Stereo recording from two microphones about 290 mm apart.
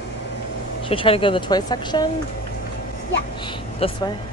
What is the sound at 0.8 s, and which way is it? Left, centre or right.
Speech, centre.